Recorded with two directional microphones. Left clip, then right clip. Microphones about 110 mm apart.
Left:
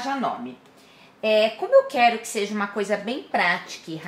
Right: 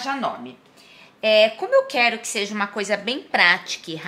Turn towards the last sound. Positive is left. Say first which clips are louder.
# right 5 dB
turn(degrees=-30)  # may be behind; listen again after turning